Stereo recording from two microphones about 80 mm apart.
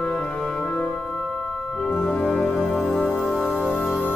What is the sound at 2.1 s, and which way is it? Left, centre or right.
Music, centre.